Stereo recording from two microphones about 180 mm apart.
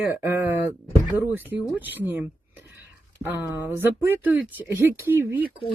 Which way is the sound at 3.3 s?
10° right (ahead or behind).